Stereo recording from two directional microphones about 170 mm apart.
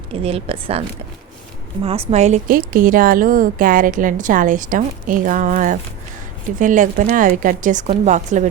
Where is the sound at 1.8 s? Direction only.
35° right (ahead or behind).